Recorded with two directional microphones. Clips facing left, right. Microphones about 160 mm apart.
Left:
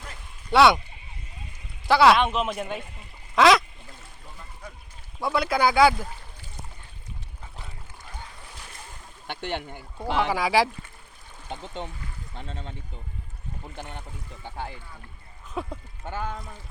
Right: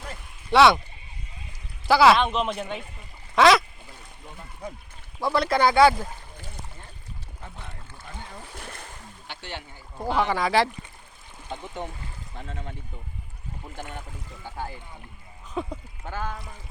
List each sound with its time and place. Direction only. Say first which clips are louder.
0.5 s speech: right 1 dB; centre (ahead or behind)
1.9 s speech: even; centre (ahead or behind)
5.2 s speech: right 1 dB; 5° left (ahead or behind)
9.2 s speech: left 7 dB; 55° left (ahead or behind)
10.2 s speech: even; 5° left (ahead or behind)
15.6 s speech: right 2 dB; 5° left (ahead or behind)
16.0 s speech: even; 20° left (ahead or behind)